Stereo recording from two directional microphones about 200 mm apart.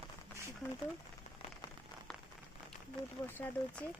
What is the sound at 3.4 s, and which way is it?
Speech, 5° left (ahead or behind).